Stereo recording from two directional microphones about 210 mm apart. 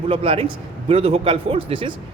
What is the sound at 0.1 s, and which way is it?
A man's voice, 25° right (ahead or behind).